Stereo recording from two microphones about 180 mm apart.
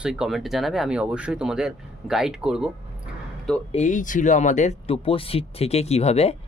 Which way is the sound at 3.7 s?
45° left (ahead or behind).